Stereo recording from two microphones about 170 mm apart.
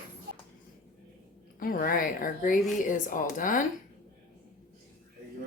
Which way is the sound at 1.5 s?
55° left (ahead or behind).